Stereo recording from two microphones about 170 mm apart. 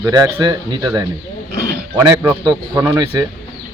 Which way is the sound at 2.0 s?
15° right (ahead or behind).